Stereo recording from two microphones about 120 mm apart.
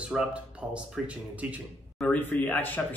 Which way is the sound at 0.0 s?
10° right (ahead or behind).